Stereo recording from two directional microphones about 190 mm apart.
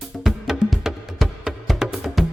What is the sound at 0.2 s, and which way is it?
Music, centre (ahead or behind).